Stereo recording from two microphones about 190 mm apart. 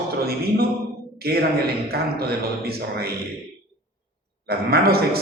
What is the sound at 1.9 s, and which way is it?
Speech, 55° right (ahead or behind).